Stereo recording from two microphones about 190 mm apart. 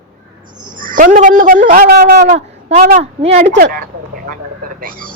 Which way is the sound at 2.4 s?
35° right (ahead or behind).